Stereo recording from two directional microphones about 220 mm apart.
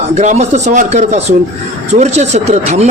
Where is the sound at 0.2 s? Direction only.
30° right (ahead or behind).